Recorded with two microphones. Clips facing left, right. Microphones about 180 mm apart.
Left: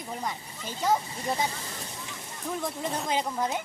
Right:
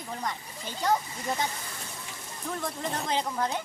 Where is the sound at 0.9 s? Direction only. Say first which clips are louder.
Left 1 dB; 25° left (ahead or behind).